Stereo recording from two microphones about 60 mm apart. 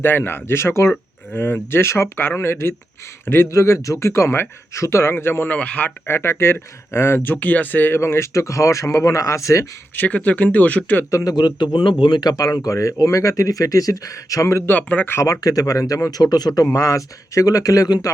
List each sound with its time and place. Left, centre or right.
0.0 s speech: left
3.5 s speech: left
5.5 s speech: left
6.1 s speech: left
8.0 s speech: left
9.9 s speech: left
11.1 s speech: left
12.5 s speech: left
14.7 s speech: left
15.2 s speech: left
16.1 s speech: left
16.7 s speech: left